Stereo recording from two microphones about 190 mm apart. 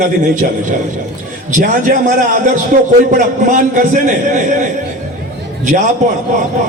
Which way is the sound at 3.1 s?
40° right (ahead or behind).